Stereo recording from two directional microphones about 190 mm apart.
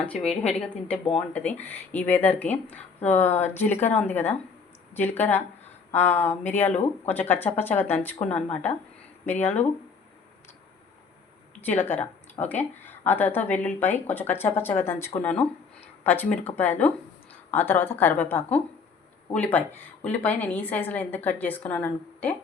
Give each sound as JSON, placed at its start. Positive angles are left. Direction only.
{"t": 0.0, "sound": "a woman's voice", "side_deg": 5}
{"t": 9.2, "sound": "a woman's voice", "side_deg": 10}
{"t": 11.6, "sound": "a woman's voice", "side_deg": 10}